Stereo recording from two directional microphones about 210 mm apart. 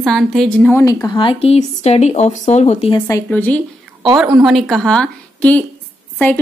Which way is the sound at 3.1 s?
10° left (ahead or behind).